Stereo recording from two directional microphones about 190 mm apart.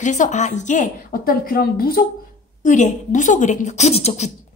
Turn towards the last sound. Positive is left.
turn(degrees=35)  # may be behind; listen again after turning